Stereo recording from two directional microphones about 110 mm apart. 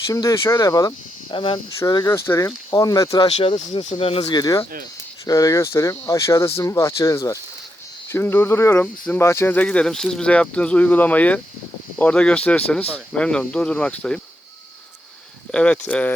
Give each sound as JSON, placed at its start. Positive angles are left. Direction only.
{"t": 0.1, "sound": "speech", "side_deg": 30}
{"t": 1.3, "sound": "speech", "side_deg": 50}
{"t": 2.0, "sound": "speech", "side_deg": 25}
{"t": 2.7, "sound": "speech", "side_deg": 35}
{"t": 3.2, "sound": "speech", "side_deg": 80}
{"t": 3.9, "sound": "speech", "side_deg": 60}
{"t": 4.3, "sound": "speech", "side_deg": 35}
{"t": 8.1, "sound": "speech", "side_deg": 20}
{"t": 15.5, "sound": "speech", "side_deg": 10}